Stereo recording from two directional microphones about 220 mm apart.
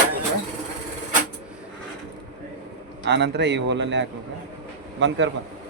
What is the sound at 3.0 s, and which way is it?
A man's voice, 50° right (ahead or behind).